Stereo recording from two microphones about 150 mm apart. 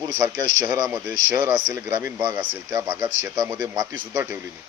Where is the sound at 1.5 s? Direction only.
25° right (ahead or behind).